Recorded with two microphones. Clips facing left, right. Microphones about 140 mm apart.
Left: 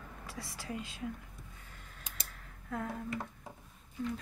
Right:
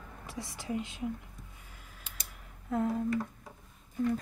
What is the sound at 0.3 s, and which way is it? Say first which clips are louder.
Speech: right 6 dB; 20° right (ahead or behind).